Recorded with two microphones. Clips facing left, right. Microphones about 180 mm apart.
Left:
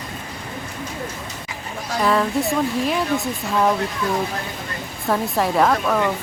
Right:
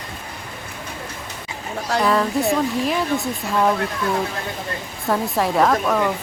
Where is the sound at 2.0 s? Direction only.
Centre (ahead or behind).